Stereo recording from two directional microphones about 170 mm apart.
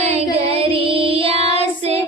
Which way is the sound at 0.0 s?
40° right (ahead or behind).